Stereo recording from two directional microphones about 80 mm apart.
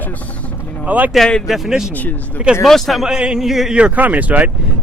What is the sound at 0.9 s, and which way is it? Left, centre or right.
Speech, right.